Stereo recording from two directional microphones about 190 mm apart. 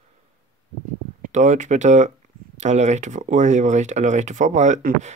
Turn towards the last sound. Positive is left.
turn(degrees=-40)  # may be behind; listen again after turning